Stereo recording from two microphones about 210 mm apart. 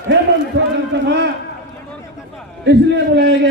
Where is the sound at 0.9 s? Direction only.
55° right (ahead or behind).